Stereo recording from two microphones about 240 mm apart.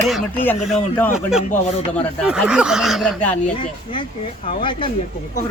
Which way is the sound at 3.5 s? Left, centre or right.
Left.